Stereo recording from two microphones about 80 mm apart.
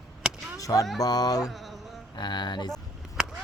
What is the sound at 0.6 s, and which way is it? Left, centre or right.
Speech, left.